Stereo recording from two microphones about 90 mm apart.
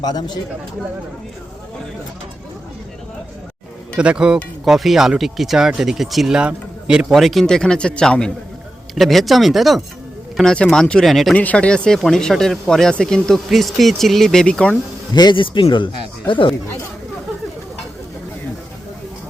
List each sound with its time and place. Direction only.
0.0 s speech: 50° left (ahead or behind)
3.9 s speech: 10° right (ahead or behind)
7.1 s speech: centre (ahead or behind)
11.3 s speech: 15° left (ahead or behind)
15.1 s speech: 55° left (ahead or behind)